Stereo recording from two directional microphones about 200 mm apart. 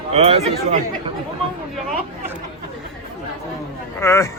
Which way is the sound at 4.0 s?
15° left (ahead or behind).